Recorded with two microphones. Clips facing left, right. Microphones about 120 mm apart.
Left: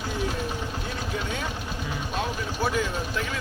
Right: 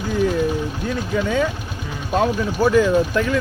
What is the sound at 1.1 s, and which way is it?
Speech, 90° right.